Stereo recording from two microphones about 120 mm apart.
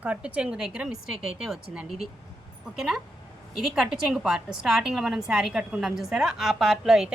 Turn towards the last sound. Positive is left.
turn(degrees=-5)  # may be behind; listen again after turning